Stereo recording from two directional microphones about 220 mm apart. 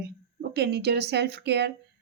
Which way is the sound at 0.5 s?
50° right (ahead or behind).